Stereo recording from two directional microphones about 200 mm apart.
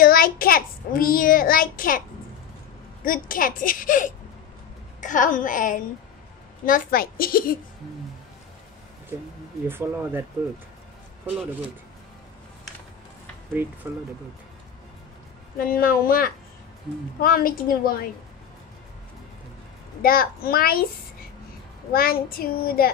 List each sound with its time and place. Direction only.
0.0 s a child's voice: 45° left (ahead or behind)
9.7 s speech: 10° right (ahead or behind)
15.6 s a child's voice: 45° left (ahead or behind)
20.0 s a child's voice: 45° left (ahead or behind)
21.9 s a child's voice: 45° left (ahead or behind)